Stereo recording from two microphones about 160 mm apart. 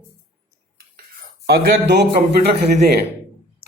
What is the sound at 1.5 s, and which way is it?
A man's voice, 90° right.